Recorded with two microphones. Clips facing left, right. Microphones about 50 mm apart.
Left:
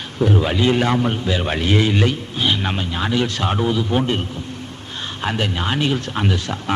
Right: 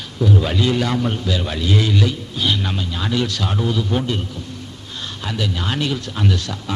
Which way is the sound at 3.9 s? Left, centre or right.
Left.